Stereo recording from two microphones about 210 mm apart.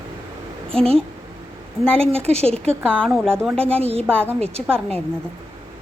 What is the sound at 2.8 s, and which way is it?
Speech, 5° left (ahead or behind).